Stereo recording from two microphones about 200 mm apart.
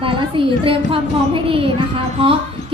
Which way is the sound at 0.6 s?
25° right (ahead or behind).